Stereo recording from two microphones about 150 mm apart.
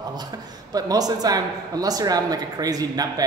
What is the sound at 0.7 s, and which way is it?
Speech, 25° right (ahead or behind).